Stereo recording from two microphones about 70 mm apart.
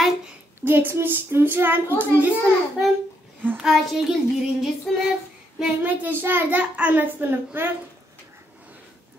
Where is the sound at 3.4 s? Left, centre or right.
Right.